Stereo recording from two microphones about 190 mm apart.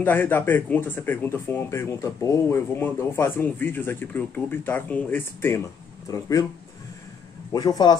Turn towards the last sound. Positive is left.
turn(degrees=20)  # may be behind; listen again after turning